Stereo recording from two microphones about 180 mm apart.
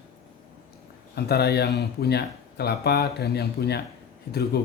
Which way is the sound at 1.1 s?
60° left (ahead or behind).